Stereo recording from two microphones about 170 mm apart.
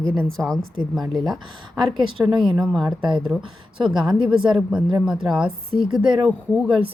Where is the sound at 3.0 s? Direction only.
25° right (ahead or behind).